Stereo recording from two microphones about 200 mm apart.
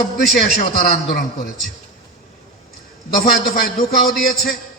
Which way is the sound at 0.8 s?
45° left (ahead or behind).